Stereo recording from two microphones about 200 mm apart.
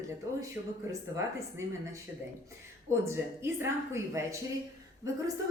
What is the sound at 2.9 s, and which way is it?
A woman's voice, 15° right (ahead or behind).